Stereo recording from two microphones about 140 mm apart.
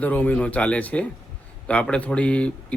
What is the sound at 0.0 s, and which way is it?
Speech, 10° left (ahead or behind).